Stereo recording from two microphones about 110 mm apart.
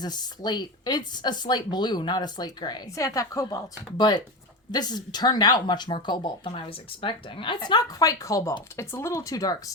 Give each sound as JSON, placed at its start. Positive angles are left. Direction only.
{"t": 0.0, "sound": "speech", "side_deg": 40}
{"t": 3.9, "sound": "speech", "side_deg": 40}